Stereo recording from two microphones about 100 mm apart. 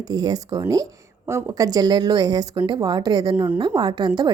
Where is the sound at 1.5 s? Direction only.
40° right (ahead or behind).